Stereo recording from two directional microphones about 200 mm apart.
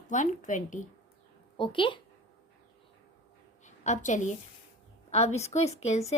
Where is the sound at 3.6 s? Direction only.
35° left (ahead or behind).